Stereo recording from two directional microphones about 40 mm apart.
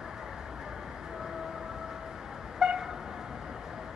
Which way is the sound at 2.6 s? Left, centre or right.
Centre.